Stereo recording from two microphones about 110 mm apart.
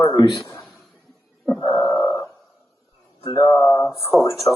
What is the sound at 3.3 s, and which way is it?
Mantra, 40° left (ahead or behind).